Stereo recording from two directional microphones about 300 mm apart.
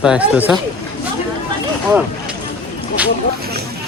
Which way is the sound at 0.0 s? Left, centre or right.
Centre.